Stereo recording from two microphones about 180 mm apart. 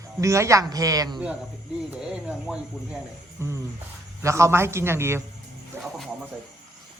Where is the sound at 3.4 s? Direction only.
15° right (ahead or behind).